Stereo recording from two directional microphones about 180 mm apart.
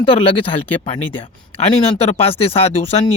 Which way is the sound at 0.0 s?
30° left (ahead or behind).